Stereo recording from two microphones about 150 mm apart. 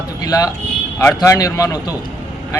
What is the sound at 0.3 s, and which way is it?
A man's voice, 25° left (ahead or behind).